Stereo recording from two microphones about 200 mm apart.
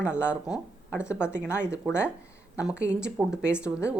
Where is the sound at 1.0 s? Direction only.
15° left (ahead or behind).